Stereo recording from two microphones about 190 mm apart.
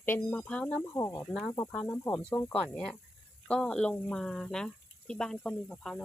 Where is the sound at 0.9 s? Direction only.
15° left (ahead or behind).